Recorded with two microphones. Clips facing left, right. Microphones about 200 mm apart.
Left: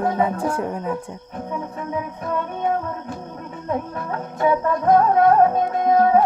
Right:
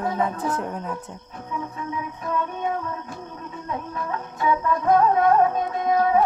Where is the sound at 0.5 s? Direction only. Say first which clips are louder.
Left 4 dB; 5° left (ahead or behind).